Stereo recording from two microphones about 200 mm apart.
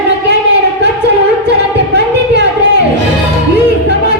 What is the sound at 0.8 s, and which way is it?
Music, 60° right (ahead or behind).